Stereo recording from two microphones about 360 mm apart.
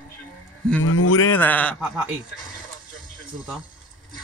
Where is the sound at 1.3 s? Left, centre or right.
Centre.